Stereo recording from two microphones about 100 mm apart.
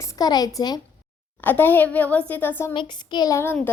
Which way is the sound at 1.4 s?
20° left (ahead or behind).